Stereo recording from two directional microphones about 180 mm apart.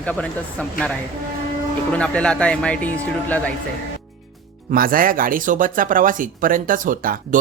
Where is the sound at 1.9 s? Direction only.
5° left (ahead or behind).